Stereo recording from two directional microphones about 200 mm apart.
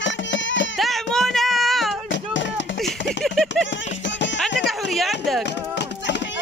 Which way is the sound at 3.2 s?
Centre (ahead or behind).